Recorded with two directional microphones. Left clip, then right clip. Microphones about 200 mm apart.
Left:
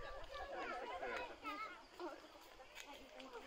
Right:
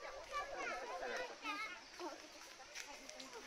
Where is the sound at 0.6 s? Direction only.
45° right (ahead or behind).